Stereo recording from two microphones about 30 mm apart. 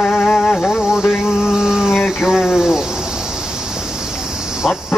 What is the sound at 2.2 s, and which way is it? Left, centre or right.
Speech, centre.